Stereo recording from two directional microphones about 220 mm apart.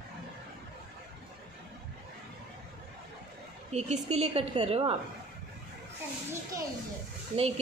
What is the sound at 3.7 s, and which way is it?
A woman's voice, 30° right (ahead or behind).